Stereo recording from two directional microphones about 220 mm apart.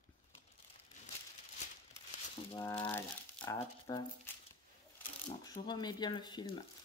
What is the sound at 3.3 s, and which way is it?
Speech, 20° left (ahead or behind).